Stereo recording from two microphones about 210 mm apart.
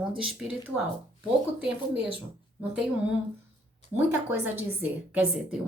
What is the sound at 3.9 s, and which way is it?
A woman's voice, 10° right (ahead or behind).